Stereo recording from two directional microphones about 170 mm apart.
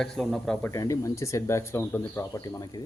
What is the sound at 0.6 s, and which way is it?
Speech, 20° left (ahead or behind).